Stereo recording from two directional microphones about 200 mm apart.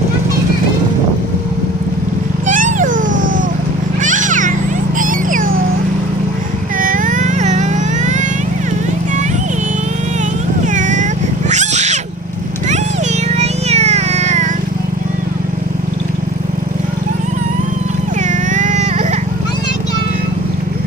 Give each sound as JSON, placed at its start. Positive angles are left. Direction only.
{"t": 2.5, "sound": "a sound", "side_deg": -40}
{"t": 4.0, "sound": "children playing", "side_deg": -40}
{"t": 4.9, "sound": "cat", "side_deg": -40}
{"t": 6.7, "sound": "vehicle", "side_deg": -40}
{"t": 10.8, "sound": "cat", "side_deg": -40}
{"t": 13.3, "sound": "a sound", "side_deg": -35}
{"t": 18.3, "sound": "baby cry", "side_deg": -40}